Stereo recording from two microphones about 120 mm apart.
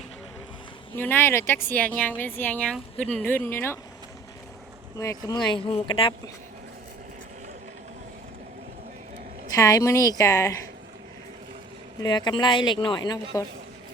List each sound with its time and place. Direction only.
0.9 s speech: 15° left (ahead or behind)
4.9 s a woman's voice: 30° left (ahead or behind)
5.5 s speech: 50° left (ahead or behind)
9.6 s a woman's voice: 25° left (ahead or behind)
11.9 s speech: 40° left (ahead or behind)